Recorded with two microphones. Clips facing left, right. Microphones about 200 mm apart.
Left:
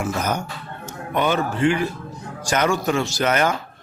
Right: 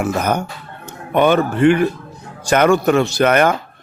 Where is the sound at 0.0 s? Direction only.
60° right (ahead or behind).